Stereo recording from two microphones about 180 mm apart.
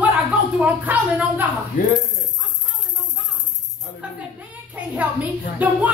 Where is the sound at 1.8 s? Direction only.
50° left (ahead or behind).